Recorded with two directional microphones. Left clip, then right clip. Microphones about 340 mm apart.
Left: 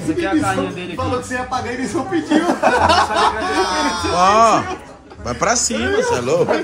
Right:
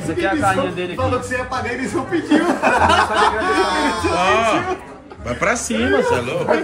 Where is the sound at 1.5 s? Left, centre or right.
Left.